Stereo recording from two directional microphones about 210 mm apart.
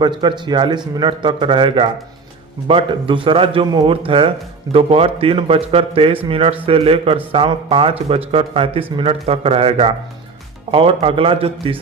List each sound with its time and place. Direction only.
0.0 s speech: 20° right (ahead or behind)